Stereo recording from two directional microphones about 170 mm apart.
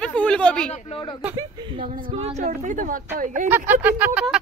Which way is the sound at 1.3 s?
25° right (ahead or behind).